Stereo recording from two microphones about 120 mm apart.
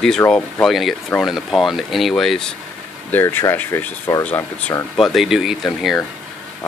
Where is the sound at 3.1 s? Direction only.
20° left (ahead or behind).